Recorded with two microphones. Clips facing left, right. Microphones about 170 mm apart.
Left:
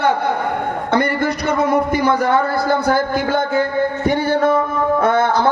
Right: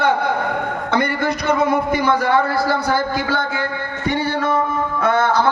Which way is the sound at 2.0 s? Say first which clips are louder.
Left 1 dB; 50° left (ahead or behind).